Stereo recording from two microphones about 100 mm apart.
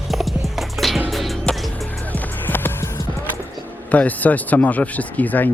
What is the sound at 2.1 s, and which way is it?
Music, 15° left (ahead or behind).